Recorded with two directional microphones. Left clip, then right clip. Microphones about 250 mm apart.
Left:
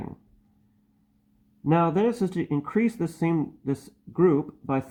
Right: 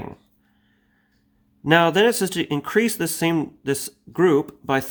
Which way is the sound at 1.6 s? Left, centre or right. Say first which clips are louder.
Right 7 dB; right.